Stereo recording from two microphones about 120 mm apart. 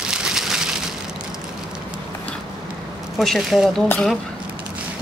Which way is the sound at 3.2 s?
Centre (ahead or behind).